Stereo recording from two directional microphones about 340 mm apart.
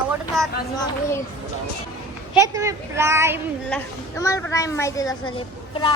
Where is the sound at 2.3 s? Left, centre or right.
Centre.